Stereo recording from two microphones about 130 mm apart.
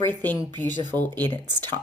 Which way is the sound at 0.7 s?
35° right (ahead or behind).